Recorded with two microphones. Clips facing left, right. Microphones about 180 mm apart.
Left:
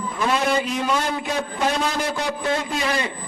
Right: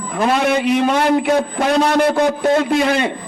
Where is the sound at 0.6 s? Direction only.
70° right (ahead or behind).